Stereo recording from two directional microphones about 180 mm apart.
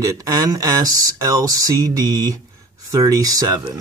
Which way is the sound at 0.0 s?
20° right (ahead or behind).